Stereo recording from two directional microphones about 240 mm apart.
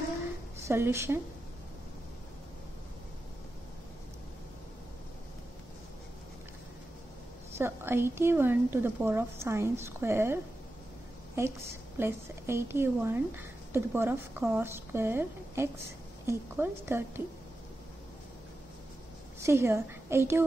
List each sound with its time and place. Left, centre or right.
0.7 s a woman's voice: centre
7.5 s a woman's voice: centre
12.0 s a woman's voice: centre
19.4 s a woman's voice: centre